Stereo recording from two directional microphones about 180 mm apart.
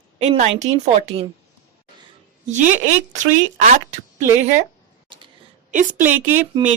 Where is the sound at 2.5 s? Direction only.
40° right (ahead or behind).